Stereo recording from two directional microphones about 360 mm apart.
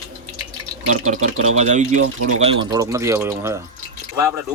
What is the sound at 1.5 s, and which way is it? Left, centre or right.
Speech, centre.